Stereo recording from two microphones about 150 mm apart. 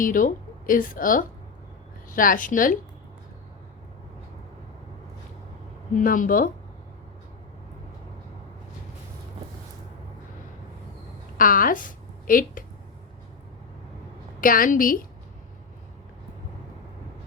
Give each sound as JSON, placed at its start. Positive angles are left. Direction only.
{"t": 0.0, "sound": "a woman's voice", "side_deg": 65}
{"t": 6.0, "sound": "a woman's voice", "side_deg": 65}
{"t": 11.3, "sound": "a woman's voice", "side_deg": 65}
{"t": 14.4, "sound": "a woman's voice", "side_deg": 70}